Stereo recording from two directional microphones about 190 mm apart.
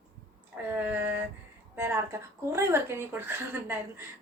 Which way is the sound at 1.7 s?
10° right (ahead or behind).